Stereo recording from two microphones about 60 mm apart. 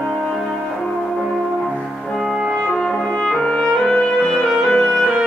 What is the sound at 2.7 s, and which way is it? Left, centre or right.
Music, centre.